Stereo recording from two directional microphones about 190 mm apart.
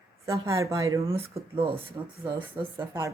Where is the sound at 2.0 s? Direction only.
15° right (ahead or behind).